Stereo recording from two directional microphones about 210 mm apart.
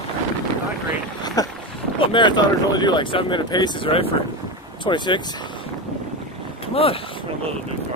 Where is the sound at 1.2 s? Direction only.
15° left (ahead or behind).